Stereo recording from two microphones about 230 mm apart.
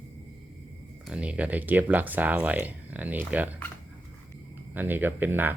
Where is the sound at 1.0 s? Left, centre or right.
Centre.